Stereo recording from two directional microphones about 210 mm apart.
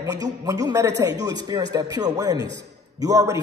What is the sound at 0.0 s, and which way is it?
A man's voice, 15° right (ahead or behind).